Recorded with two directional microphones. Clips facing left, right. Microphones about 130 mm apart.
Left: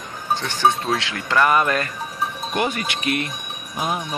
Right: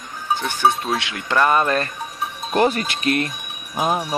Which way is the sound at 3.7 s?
35° right (ahead or behind).